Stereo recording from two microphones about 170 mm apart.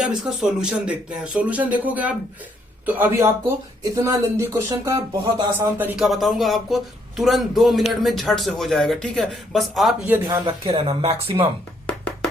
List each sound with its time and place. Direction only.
0.0 s speech: 5° right (ahead or behind)
6.1 s speech: centre (ahead or behind)
10.4 s speech: 35° right (ahead or behind)
11.9 s music: 5° left (ahead or behind)